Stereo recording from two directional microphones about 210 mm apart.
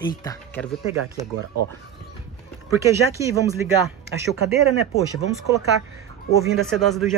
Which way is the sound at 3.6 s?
10° right (ahead or behind).